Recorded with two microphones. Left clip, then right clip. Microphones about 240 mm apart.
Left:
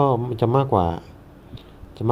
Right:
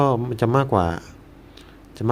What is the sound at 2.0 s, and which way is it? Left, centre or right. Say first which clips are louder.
Speech: even; centre.